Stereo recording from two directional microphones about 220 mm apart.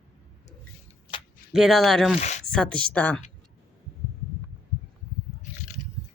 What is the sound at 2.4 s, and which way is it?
Speech, 5° left (ahead or behind).